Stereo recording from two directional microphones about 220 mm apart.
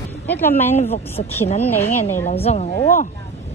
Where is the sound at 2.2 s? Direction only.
30° left (ahead or behind).